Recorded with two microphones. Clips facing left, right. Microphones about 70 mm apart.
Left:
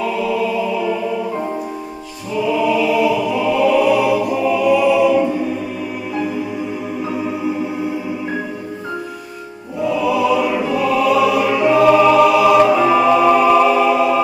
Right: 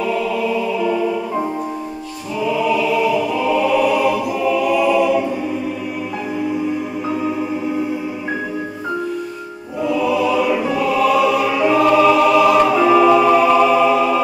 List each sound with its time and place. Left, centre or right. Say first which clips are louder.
2.7 s music: left 1 dB; centre
9.8 s choir: left 1 dB; centre